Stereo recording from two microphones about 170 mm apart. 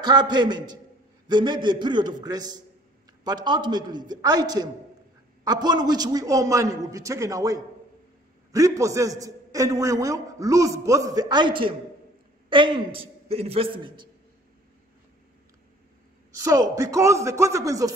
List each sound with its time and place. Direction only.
0.0 s a man's voice: 25° right (ahead or behind)
16.3 s a man's voice: 20° right (ahead or behind)